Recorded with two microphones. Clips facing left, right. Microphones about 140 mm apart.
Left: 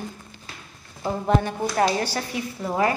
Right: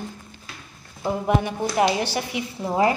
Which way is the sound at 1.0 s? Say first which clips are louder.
Even; 10° right (ahead or behind).